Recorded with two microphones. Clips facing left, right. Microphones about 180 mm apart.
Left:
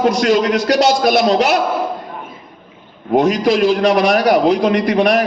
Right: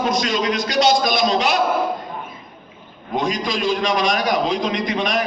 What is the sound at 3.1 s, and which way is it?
A man's voice, 70° left (ahead or behind).